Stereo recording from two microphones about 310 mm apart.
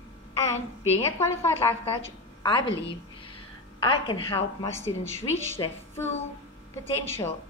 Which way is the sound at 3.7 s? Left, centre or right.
Centre.